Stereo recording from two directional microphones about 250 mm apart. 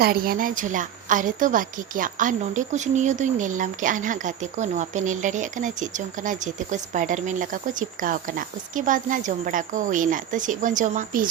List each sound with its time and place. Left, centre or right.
0.0 s a woman's voice: right